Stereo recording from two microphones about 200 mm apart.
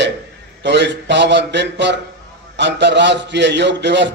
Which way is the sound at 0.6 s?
60° right (ahead or behind).